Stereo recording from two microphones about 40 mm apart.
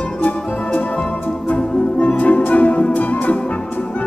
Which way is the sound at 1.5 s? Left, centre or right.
Left.